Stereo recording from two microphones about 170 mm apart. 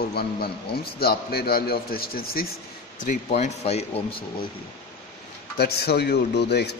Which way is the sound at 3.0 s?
40° left (ahead or behind).